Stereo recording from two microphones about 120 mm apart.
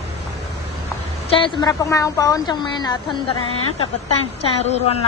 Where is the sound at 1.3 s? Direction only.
45° left (ahead or behind).